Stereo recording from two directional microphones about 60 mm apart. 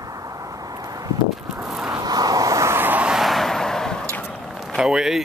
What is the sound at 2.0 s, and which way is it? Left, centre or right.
Vehicle, right.